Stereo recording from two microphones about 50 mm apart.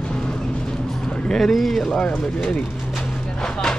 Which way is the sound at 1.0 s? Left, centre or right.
Centre.